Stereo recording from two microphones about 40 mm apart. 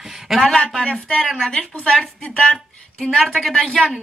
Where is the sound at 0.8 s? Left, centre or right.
Left.